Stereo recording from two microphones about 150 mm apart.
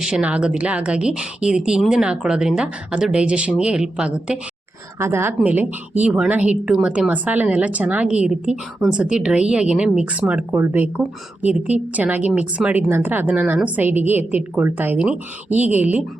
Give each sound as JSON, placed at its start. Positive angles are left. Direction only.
{"t": 0.0, "sound": "a woman's voice", "side_deg": -5}